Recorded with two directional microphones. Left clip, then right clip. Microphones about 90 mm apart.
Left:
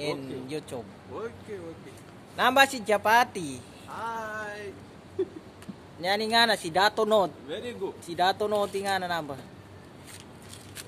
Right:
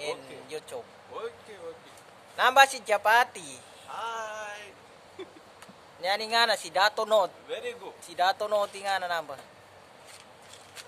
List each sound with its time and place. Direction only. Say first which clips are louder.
0.0 s speech: left 3 dB; 5° left (ahead or behind)
2.3 s speech: right 1 dB; centre (ahead or behind)
4.0 s a sound: left 2 dB; 25° right (ahead or behind)
5.9 s speech: left 2 dB; centre (ahead or behind)